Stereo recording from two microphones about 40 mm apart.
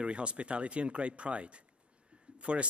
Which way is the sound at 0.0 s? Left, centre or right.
Right.